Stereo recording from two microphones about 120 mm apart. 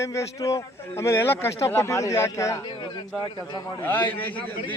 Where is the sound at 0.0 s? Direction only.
25° left (ahead or behind).